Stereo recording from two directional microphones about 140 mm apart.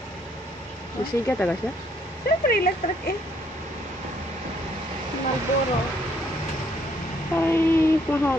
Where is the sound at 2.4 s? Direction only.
90° left.